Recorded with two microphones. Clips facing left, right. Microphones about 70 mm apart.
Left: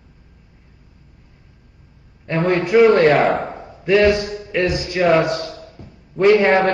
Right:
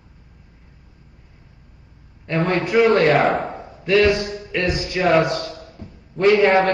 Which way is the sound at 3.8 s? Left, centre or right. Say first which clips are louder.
Left 2 dB; left.